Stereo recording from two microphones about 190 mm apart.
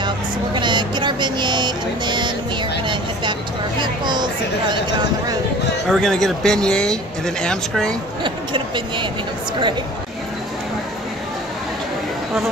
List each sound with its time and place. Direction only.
0.6 s speech: 25° right (ahead or behind)
3.8 s speech: 25° right (ahead or behind)
5.9 s speech: centre (ahead or behind)
8.2 s speech: 25° right (ahead or behind)